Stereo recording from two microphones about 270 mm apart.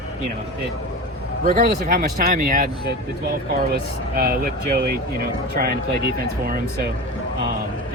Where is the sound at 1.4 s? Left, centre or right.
Right.